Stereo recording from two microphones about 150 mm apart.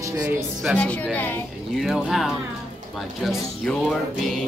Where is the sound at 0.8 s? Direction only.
10° left (ahead or behind).